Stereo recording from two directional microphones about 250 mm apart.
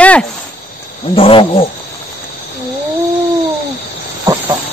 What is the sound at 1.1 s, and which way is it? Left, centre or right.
Wild animals, left.